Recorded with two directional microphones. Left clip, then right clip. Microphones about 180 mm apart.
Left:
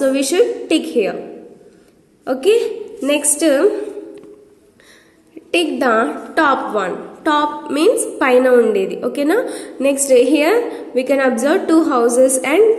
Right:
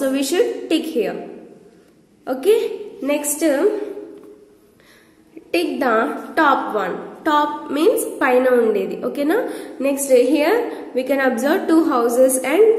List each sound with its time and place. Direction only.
0.0 s a woman's voice: 15° left (ahead or behind)
2.2 s a woman's voice: 20° left (ahead or behind)
5.5 s a woman's voice: 20° left (ahead or behind)